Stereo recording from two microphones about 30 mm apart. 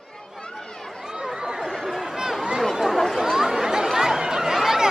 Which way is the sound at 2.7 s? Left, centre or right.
Centre.